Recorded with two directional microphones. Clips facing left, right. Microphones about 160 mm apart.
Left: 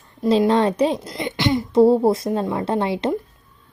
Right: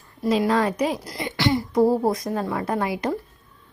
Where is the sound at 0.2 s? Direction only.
30° left (ahead or behind).